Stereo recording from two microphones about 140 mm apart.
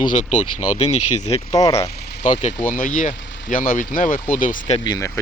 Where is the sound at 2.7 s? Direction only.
75° left (ahead or behind).